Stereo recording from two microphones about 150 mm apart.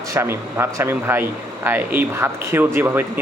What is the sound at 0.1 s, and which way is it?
Speech, 20° right (ahead or behind).